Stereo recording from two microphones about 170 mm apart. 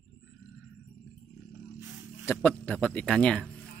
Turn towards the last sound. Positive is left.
turn(degrees=5)  # may be behind; listen again after turning